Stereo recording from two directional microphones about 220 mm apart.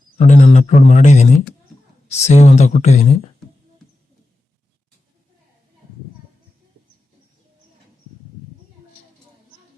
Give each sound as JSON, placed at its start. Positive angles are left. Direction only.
{"t": 0.2, "sound": "speech", "side_deg": 30}